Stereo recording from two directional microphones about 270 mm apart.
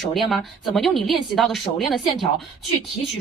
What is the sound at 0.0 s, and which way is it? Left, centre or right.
Speech, centre.